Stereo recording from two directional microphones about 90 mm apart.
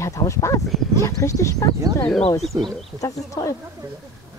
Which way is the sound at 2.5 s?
35° right (ahead or behind).